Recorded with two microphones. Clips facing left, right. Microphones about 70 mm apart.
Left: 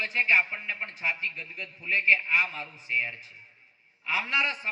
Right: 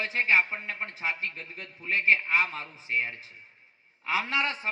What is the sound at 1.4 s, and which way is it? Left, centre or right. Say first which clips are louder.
A man's voice: left 2 dB; right.